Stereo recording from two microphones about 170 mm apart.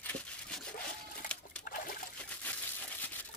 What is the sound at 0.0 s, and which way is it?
Wood, 5° left (ahead or behind).